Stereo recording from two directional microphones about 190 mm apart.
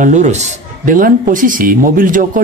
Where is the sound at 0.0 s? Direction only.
40° right (ahead or behind).